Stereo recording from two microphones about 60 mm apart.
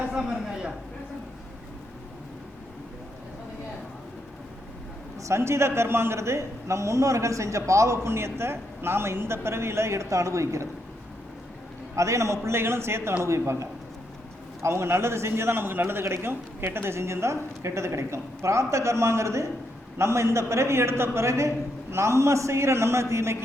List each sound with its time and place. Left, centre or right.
0.0 s a sound: centre
5.2 s a man's voice: right
11.9 s a man's voice: right